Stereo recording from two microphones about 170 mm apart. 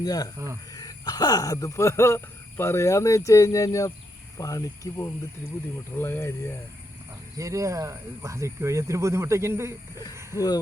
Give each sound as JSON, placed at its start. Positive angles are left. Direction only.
{"t": 0.0, "sound": "speech", "side_deg": 20}
{"t": 0.3, "sound": "speech", "side_deg": -15}
{"t": 0.7, "sound": "speech", "side_deg": 20}
{"t": 7.3, "sound": "speech", "side_deg": -20}